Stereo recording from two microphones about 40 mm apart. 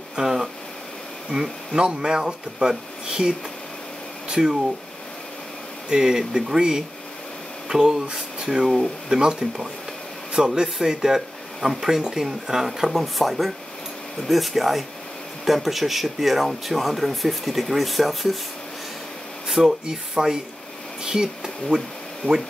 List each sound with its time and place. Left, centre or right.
0.1 s a sound: centre
1.3 s speech: centre
5.9 s speech: centre
19.5 s speech: centre
22.2 s speech: left